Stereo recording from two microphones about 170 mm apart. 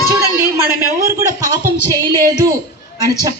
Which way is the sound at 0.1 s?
15° right (ahead or behind).